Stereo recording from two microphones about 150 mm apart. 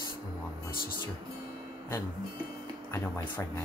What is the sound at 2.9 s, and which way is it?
Speech, 15° left (ahead or behind).